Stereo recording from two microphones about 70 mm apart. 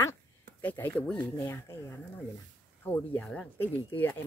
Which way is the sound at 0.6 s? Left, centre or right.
Left.